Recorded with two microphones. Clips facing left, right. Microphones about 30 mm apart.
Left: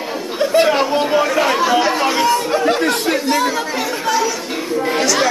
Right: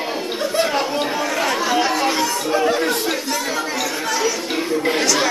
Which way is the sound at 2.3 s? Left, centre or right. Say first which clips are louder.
Left 4 dB; left.